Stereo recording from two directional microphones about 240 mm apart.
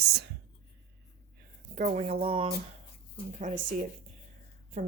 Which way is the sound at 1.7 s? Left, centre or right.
Right.